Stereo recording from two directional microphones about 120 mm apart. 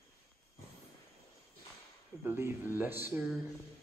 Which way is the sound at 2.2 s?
20° right (ahead or behind).